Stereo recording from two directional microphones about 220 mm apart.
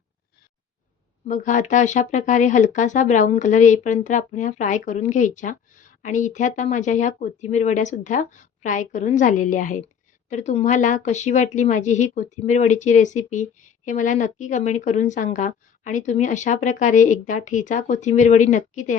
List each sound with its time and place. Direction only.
1.2 s speech: 35° left (ahead or behind)